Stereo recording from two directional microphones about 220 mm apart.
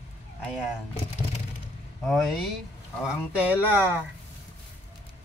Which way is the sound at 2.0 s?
Centre (ahead or behind).